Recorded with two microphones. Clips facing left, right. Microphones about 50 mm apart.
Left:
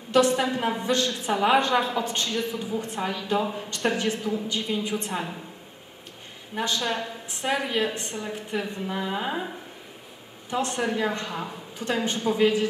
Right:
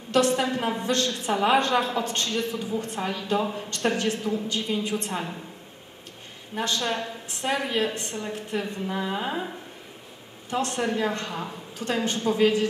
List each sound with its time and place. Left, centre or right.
0.1 s a woman's voice: centre
6.5 s a woman's voice: centre